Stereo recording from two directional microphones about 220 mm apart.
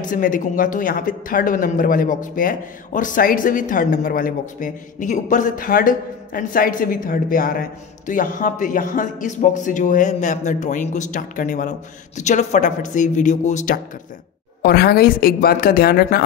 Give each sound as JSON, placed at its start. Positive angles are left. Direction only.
{"t": 0.1, "sound": "speech", "side_deg": 40}
{"t": 14.6, "sound": "a woman's voice", "side_deg": 45}